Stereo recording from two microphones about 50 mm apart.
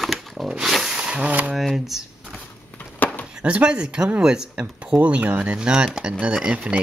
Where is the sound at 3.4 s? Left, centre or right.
Right.